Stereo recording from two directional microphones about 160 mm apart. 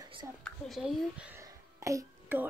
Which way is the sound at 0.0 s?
30° right (ahead or behind).